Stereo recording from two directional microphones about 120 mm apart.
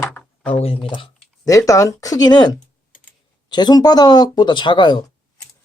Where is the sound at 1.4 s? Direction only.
30° left (ahead or behind).